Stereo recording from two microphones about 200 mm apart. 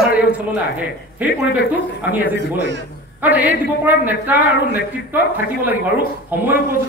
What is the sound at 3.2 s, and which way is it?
Speech, 10° right (ahead or behind).